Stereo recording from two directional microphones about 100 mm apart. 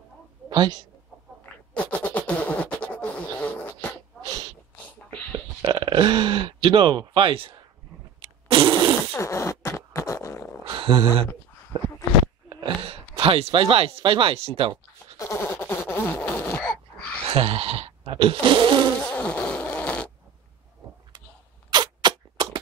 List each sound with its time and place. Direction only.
0.5 s a woman's voice: 45° right (ahead or behind)
1.4 s a sound: 15° left (ahead or behind)
5.7 s speech: 50° right (ahead or behind)
8.2 s fart: 60° right (ahead or behind)
9.2 s fart: 30° left (ahead or behind)
10.6 s a sound: 60° right (ahead or behind)
12.8 s speech: 65° right (ahead or behind)
15.1 s dog: 30° left (ahead or behind)
15.4 s a sound: 20° left (ahead or behind)
17.3 s speech: 75° right (ahead or behind); by 18.9 s 55° right (ahead or behind)
19.1 s fart: 15° left (ahead or behind)
21.6 s a sound: 50° right (ahead or behind)